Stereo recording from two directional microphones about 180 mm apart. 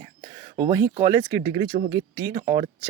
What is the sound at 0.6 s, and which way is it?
Speech, 20° right (ahead or behind).